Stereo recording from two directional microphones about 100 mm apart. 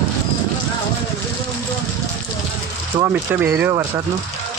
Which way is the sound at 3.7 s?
35° right (ahead or behind).